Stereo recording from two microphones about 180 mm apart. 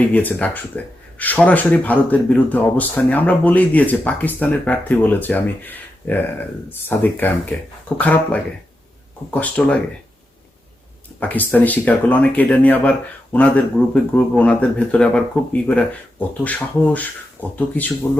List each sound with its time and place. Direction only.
0.0 s speech: 10° left (ahead or behind)
11.2 s speech: 10° left (ahead or behind)